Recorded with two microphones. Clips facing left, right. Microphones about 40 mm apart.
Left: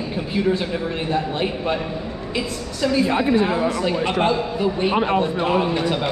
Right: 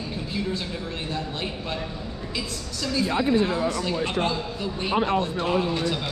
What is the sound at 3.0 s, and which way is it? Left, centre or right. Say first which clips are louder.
Speech: right 1 dB; left.